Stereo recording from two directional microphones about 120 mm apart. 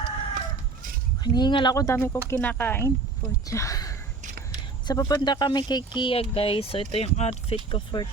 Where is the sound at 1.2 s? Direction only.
35° left (ahead or behind).